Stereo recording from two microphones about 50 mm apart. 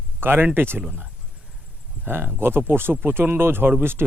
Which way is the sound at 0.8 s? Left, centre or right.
Right.